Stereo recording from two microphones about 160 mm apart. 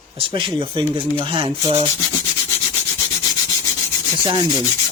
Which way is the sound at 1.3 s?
35° right (ahead or behind).